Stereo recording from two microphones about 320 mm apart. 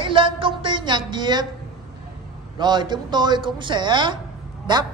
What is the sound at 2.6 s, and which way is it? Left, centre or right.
Speech, centre.